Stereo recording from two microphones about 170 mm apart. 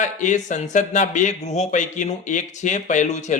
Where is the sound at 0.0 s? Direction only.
45° left (ahead or behind).